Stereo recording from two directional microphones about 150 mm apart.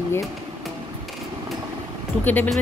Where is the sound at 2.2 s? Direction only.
10° left (ahead or behind).